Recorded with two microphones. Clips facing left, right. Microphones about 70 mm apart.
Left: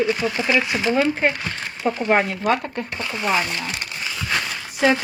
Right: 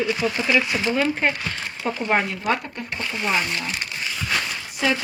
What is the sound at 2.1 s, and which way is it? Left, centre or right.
Speech, left.